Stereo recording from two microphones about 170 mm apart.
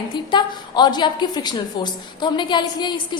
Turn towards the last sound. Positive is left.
turn(degrees=25)  # may be behind; listen again after turning